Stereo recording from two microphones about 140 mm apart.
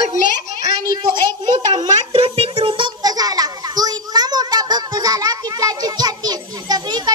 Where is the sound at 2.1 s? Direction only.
45° right (ahead or behind).